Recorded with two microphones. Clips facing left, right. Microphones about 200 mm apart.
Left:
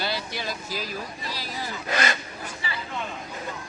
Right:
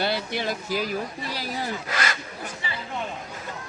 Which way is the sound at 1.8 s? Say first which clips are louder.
Left 3 dB; 25° left (ahead or behind).